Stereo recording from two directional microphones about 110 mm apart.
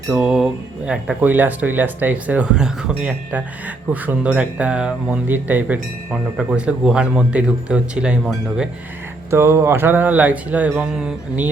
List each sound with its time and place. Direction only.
0.1 s speech: 5° right (ahead or behind)
9.3 s speech: 20° right (ahead or behind)